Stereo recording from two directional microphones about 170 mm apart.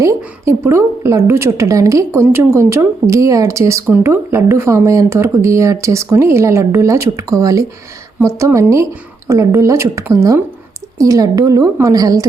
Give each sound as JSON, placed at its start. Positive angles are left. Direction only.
{"t": 0.2, "sound": "a woman's voice", "side_deg": -15}